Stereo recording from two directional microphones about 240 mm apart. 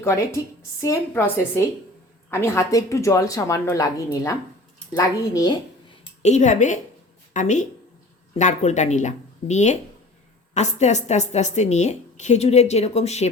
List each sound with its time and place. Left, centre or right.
0.0 s speech: centre
6.2 s a woman's voice: left